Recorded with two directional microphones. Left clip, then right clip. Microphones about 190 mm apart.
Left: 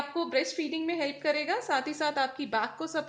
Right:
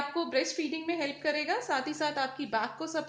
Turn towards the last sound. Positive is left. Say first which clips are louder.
# left 1 dB
turn(degrees=35)  # may be behind; listen again after turning